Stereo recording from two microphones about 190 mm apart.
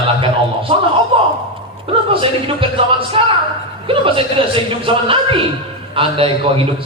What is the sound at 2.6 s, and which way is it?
A man's voice, 30° right (ahead or behind).